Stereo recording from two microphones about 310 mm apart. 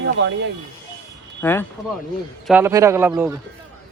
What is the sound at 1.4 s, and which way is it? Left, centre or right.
Speech, centre.